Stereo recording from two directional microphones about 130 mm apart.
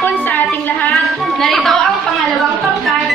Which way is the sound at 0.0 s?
15° left (ahead or behind).